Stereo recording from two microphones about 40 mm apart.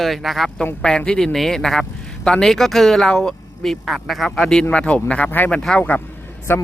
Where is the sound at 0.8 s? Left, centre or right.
Centre.